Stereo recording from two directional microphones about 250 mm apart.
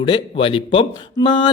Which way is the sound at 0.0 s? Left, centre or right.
Left.